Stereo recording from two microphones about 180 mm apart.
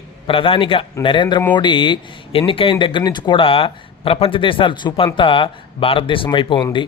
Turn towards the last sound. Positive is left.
turn(degrees=30)  # may be behind; listen again after turning